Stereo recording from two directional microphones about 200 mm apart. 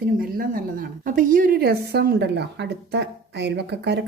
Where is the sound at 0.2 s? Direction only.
45° right (ahead or behind).